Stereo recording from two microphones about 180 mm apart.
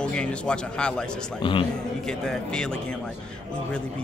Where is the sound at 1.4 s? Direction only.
30° left (ahead or behind).